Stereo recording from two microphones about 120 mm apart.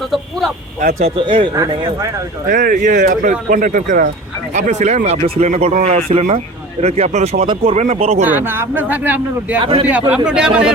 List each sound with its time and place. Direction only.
0.1 s speech: centre (ahead or behind)
0.8 s speech: 75° right (ahead or behind)
1.1 s speech: 45° right (ahead or behind)
2.5 s speech: 90° right
4.5 s speech: 75° right (ahead or behind)
5.2 s speech: 60° right (ahead or behind)
7.4 s speech: 50° right (ahead or behind); by 8.3 s 70° right (ahead or behind)
8.3 s speech: 20° right (ahead or behind)
9.6 s speech: 50° right (ahead or behind)
10.2 s speech: 5° right (ahead or behind)